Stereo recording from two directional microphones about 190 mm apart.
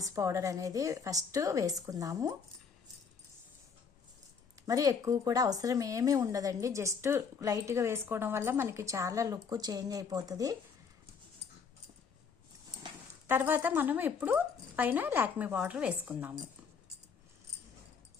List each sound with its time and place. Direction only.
0.0 s a woman's voice: 15° right (ahead or behind)
4.6 s a woman's voice: 20° right (ahead or behind)
13.2 s a woman's voice: 10° right (ahead or behind)